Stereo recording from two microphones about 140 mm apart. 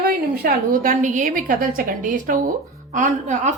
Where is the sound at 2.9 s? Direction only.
65° right (ahead or behind).